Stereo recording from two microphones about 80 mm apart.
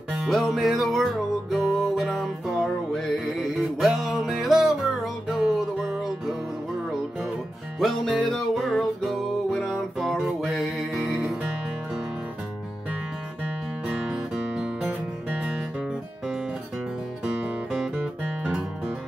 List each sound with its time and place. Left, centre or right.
0.2 s music: centre
7.8 s music: centre
14.0 s music: centre